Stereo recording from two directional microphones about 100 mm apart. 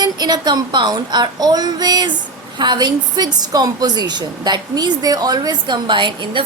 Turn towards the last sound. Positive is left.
turn(degrees=-50)  # may be behind; listen again after turning